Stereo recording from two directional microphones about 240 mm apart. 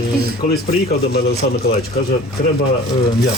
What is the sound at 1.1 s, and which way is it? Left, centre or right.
Speech, left.